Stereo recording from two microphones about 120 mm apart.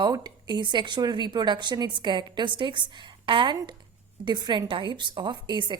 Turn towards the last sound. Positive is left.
turn(degrees=-40)  # may be behind; listen again after turning